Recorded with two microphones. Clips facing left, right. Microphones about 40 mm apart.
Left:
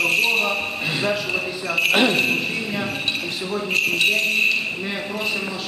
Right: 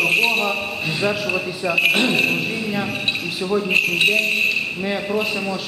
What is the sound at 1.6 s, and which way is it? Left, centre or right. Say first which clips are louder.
Speech: right 4 dB; centre.